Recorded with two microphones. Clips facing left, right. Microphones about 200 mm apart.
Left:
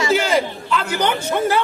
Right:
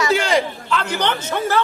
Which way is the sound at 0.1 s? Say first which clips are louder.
Even; centre (ahead or behind).